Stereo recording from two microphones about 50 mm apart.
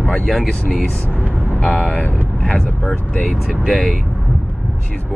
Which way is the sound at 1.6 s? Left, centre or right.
Left.